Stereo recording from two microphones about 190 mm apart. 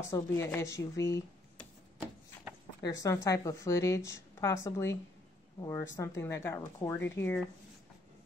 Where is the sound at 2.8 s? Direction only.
15° left (ahead or behind).